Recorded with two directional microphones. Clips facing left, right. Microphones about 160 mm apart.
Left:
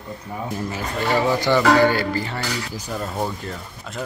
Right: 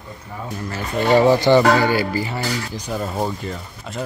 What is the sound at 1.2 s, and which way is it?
Speech, 25° right (ahead or behind).